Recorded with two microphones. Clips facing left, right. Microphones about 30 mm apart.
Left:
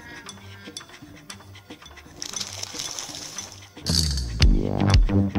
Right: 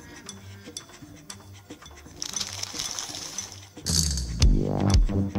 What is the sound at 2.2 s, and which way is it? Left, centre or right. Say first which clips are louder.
Music: even; centre.